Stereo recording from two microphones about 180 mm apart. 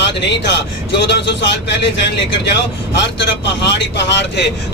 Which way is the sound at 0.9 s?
70° left (ahead or behind).